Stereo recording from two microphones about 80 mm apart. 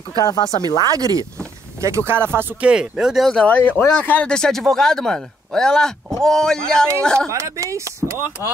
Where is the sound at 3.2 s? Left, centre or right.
Centre.